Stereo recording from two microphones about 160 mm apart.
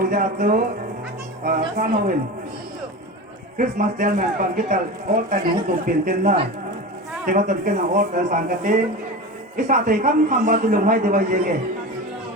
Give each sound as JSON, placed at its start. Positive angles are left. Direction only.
{"t": 0.1, "sound": "a man's voice", "side_deg": -60}
{"t": 3.6, "sound": "a man's voice", "side_deg": -55}